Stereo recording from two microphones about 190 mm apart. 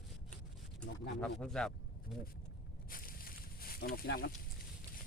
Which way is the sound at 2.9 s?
50° left (ahead or behind).